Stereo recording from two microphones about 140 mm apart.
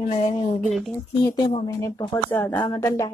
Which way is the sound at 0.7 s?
Centre (ahead or behind).